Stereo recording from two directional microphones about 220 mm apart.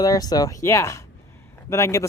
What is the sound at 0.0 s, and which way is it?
Speech, 15° left (ahead or behind).